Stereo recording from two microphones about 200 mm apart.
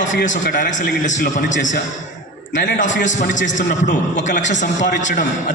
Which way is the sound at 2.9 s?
70° left (ahead or behind).